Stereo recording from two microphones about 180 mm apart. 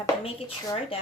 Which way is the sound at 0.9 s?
30° left (ahead or behind).